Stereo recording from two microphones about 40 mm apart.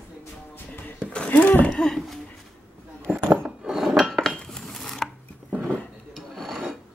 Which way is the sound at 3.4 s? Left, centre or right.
Centre.